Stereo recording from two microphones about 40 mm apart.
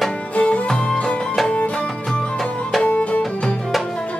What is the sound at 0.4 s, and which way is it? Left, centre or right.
Music, left.